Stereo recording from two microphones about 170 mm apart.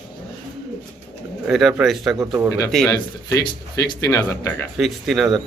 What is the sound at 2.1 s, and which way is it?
Speech, 20° right (ahead or behind).